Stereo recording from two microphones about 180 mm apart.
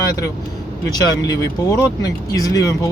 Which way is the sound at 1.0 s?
20° left (ahead or behind).